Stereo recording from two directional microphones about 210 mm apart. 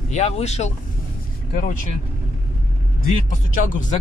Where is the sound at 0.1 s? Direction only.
30° left (ahead or behind).